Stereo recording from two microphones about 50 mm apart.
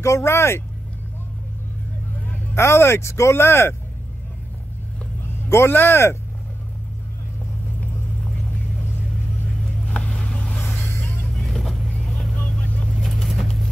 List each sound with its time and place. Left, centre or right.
0.0 s speech: left
2.5 s speech: left
5.2 s speech: left
9.8 s vehicle: centre
11.3 s vehicle: centre
12.6 s vehicle: left
12.9 s vehicle: centre